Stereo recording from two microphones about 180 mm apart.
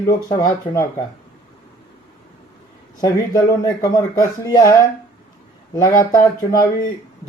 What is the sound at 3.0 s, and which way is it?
Speech, 20° left (ahead or behind).